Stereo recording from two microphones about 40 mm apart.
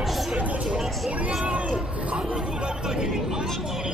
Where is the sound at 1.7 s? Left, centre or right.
Right.